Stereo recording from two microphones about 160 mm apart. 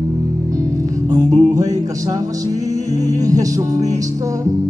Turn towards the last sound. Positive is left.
turn(degrees=-20)  # may be behind; listen again after turning